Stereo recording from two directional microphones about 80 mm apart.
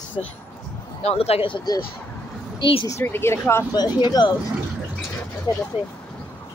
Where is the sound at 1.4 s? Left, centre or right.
Left.